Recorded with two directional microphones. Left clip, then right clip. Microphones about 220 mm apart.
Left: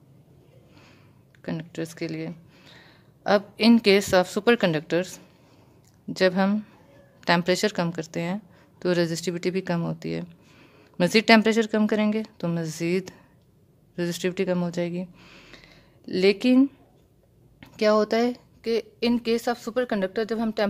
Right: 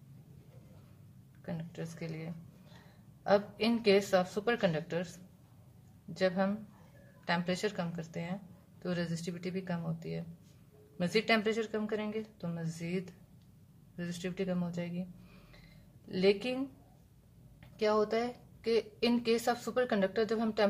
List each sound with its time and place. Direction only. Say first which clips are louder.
1.4 s a woman's voice: left 11 dB; 50° left (ahead or behind)